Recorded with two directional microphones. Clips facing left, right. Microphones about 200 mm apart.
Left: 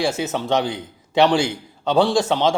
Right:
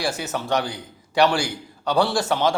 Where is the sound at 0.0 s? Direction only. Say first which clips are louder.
Left 4 dB; 20° left (ahead or behind).